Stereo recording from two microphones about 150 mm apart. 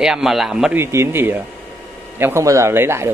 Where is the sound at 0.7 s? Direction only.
15° right (ahead or behind).